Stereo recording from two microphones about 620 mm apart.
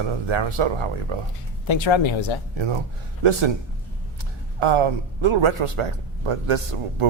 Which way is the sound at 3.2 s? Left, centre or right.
Right.